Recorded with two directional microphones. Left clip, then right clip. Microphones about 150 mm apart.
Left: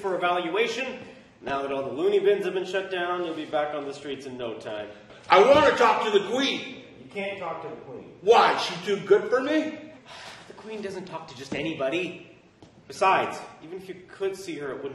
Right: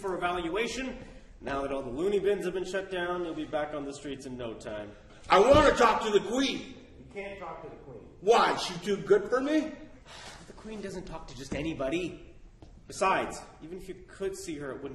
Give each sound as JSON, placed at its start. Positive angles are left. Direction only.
{"t": 0.3, "sound": "a man's voice", "side_deg": -20}
{"t": 8.3, "sound": "a man's voice", "side_deg": -15}
{"t": 10.8, "sound": "a man's voice", "side_deg": -15}